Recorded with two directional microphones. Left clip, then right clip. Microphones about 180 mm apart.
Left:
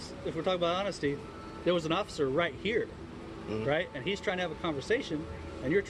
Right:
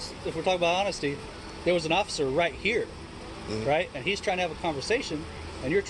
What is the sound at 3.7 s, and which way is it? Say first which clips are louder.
Speech: right 5 dB; 60° left (ahead or behind).